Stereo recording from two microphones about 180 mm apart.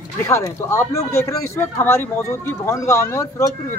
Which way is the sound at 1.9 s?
10° left (ahead or behind).